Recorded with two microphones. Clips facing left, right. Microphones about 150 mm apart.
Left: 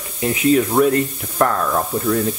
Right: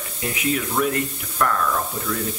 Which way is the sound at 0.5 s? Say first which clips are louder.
Left 8 dB; 35° left (ahead or behind).